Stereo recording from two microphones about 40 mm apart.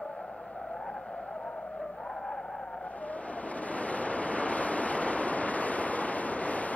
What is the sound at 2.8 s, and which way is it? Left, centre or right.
Waves, left.